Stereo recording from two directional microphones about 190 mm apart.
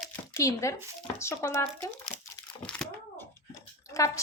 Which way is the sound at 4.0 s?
15° left (ahead or behind).